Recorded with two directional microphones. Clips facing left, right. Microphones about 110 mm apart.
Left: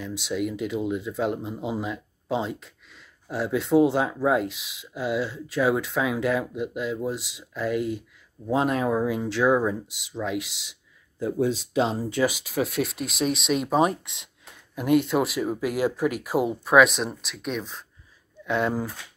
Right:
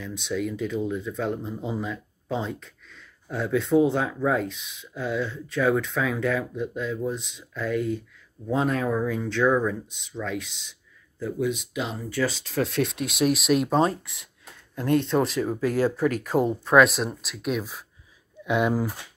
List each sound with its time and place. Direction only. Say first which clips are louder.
0.0 s speech: left 1 dB; 5° left (ahead or behind)
11.1 s speech: left 2 dB; 25° left (ahead or behind)
12.1 s speech: left 2 dB; 15° left (ahead or behind); by 13.7 s centre (ahead or behind)
13.7 s speech: even; 20° left (ahead or behind); by 18.9 s 10° right (ahead or behind)